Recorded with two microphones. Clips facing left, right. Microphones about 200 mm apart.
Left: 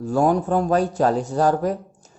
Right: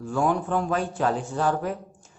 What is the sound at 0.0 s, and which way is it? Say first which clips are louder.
Speech: left 5 dB; 40° left (ahead or behind).